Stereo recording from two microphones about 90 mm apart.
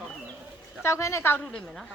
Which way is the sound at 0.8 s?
35° left (ahead or behind).